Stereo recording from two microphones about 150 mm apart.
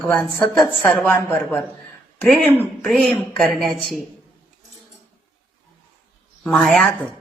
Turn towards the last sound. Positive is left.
turn(degrees=5)  # may be behind; listen again after turning